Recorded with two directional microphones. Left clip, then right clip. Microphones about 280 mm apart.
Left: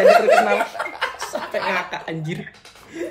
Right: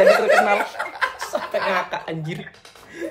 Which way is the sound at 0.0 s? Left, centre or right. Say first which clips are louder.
Left 2 dB; centre.